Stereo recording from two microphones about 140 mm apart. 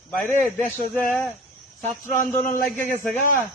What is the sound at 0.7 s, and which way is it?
Speech, 15° left (ahead or behind).